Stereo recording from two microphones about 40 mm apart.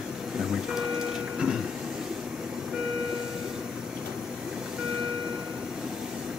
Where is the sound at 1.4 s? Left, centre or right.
Centre.